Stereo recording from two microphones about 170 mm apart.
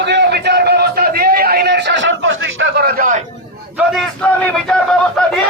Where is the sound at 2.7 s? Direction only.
65° right (ahead or behind).